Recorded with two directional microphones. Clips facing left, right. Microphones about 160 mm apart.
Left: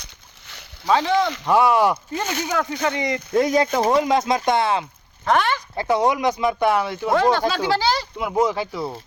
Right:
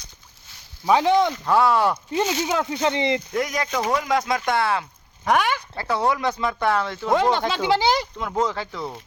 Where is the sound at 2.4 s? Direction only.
20° right (ahead or behind).